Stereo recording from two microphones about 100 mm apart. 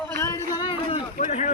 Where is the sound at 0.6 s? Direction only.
65° left (ahead or behind); by 1.4 s 80° left.